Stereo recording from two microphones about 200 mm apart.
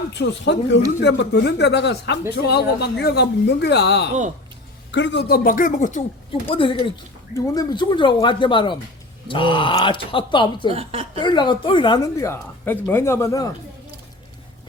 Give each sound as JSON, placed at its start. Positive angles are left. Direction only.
{"t": 0.1, "sound": "speech", "side_deg": 60}
{"t": 6.5, "sound": "a woman's voice", "side_deg": 25}
{"t": 10.7, "sound": "a woman's voice", "side_deg": -30}
{"t": 11.2, "sound": "a woman's voice", "side_deg": 20}